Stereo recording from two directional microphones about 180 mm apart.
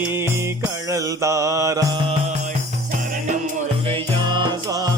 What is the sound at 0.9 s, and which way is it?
Mantra, 15° right (ahead or behind).